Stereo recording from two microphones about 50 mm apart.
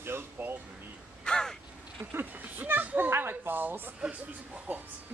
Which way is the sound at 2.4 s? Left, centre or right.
Right.